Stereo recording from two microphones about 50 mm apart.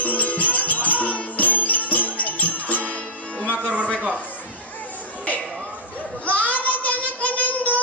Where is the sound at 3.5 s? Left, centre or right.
Right.